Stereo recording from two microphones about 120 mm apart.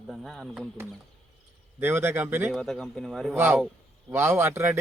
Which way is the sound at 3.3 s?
20° right (ahead or behind).